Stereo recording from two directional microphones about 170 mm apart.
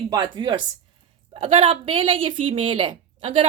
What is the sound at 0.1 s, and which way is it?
A woman's voice, 25° right (ahead or behind).